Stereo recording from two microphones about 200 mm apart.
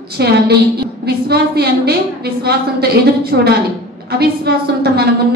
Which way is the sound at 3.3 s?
55° right (ahead or behind).